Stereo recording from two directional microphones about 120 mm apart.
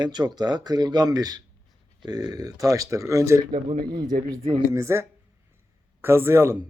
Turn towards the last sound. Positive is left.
turn(degrees=-20)  # may be behind; listen again after turning